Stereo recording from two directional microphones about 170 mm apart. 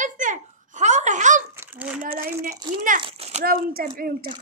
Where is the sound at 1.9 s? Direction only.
60° right (ahead or behind).